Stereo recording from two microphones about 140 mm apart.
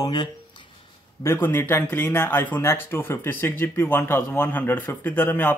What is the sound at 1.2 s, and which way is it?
Speech, 15° left (ahead or behind).